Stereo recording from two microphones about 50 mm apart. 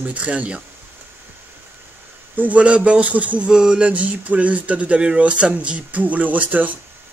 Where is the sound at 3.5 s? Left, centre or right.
Centre; by 6.7 s right.